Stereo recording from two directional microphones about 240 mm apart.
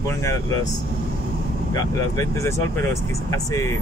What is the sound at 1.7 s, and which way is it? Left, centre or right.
Speech, centre.